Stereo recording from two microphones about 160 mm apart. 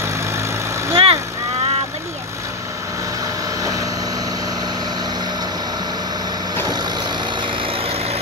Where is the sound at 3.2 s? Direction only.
20° right (ahead or behind).